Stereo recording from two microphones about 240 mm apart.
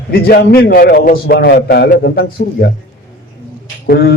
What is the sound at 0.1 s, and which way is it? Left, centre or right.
A man's voice, left.